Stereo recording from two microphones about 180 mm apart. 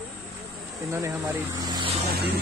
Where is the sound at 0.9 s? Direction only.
15° right (ahead or behind).